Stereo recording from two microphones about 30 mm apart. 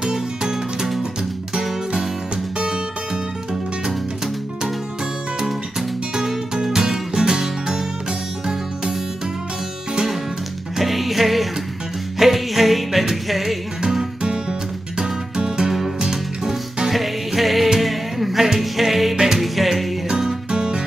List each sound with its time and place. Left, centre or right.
0.0 s music: right
5.4 s music: centre
10.8 s music: centre
15.0 s music: right
16.9 s music: centre
19.1 s music: centre
19.4 s music: centre
20.1 s music: centre